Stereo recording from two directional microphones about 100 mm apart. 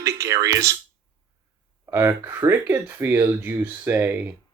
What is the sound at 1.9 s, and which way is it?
Speech, 25° right (ahead or behind).